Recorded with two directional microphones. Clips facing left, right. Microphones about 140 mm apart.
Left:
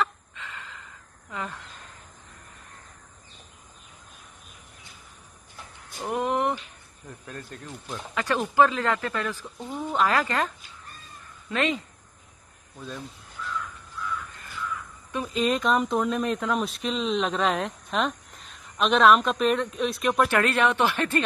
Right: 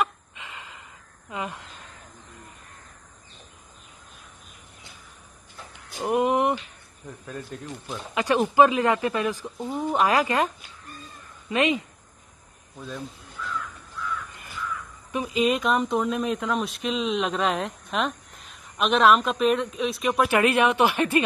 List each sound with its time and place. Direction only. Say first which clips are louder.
0.0 s a sound: right 1 dB; 15° right (ahead or behind)
1.3 s speech: right 2 dB; 15° right (ahead or behind)
5.9 s speech: right 4 dB; 15° right (ahead or behind)
7.2 s speech: right 4 dB; centre (ahead or behind)
8.1 s speech: right 4 dB; 15° right (ahead or behind)
15.1 s speech: right 2 dB; 5° right (ahead or behind)
20.2 s speech: right 2 dB; 15° right (ahead or behind)